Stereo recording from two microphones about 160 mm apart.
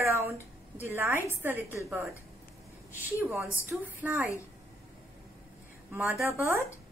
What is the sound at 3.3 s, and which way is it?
Speech, 10° right (ahead or behind).